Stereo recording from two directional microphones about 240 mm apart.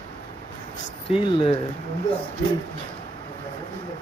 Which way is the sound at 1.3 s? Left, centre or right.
Centre.